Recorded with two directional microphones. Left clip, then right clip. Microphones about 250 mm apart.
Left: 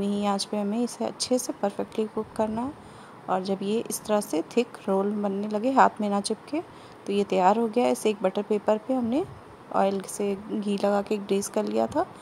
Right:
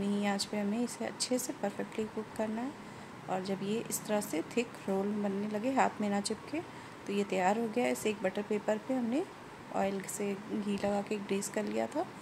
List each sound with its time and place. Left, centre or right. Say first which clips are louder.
0.0 s speech: left 7 dB; left